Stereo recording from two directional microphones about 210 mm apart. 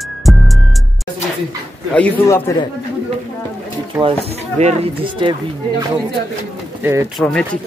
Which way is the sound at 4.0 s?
30° right (ahead or behind).